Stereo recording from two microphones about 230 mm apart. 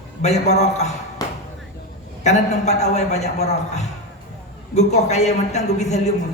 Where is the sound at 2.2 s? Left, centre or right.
Left.